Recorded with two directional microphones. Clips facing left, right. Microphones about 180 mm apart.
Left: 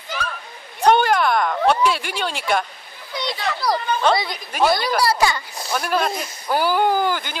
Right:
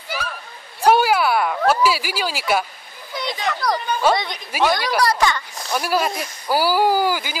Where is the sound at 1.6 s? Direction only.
5° right (ahead or behind).